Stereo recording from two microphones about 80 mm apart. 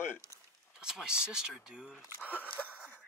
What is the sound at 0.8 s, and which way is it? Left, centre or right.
Speech, centre.